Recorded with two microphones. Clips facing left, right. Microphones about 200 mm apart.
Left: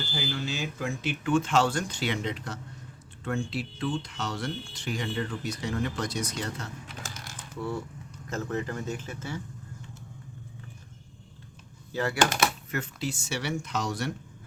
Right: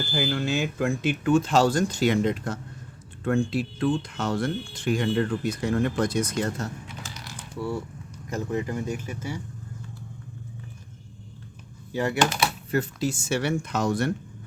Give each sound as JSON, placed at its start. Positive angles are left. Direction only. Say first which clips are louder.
{"t": 0.1, "sound": "speech", "louder": "right 8 dB", "side_deg": -55}
{"t": 7.0, "sound": "mechanisms", "louder": "right 2 dB", "side_deg": 50}
{"t": 8.3, "sound": "speech", "louder": "right 3 dB", "side_deg": -15}
{"t": 11.9, "sound": "speech", "louder": "right 4 dB", "side_deg": -20}
{"t": 12.2, "sound": "speech", "louder": "left 1 dB", "side_deg": 50}
{"t": 12.7, "sound": "speech", "louder": "right 7 dB", "side_deg": -40}